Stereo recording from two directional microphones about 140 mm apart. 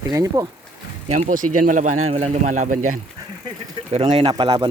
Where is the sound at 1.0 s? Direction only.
55° right (ahead or behind).